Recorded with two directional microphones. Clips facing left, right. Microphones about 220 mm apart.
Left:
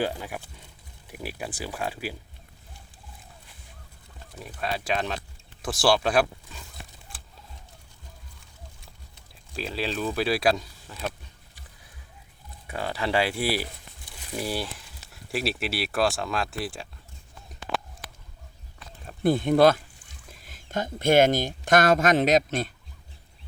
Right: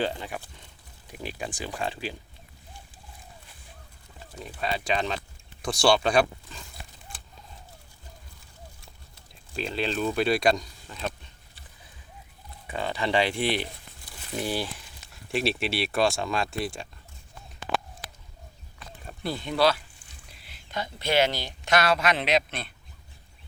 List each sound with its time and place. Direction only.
0.0 s speech: 5° left (ahead or behind)
4.6 s speech: centre (ahead or behind)
9.6 s speech: 5° left (ahead or behind)
12.6 s speech: 5° left (ahead or behind)
19.2 s speech: 50° left (ahead or behind)